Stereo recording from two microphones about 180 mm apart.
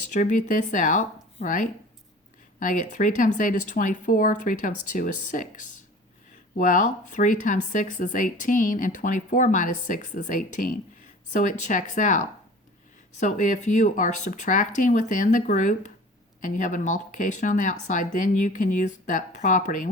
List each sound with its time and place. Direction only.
0.1 s speech: 45° left (ahead or behind)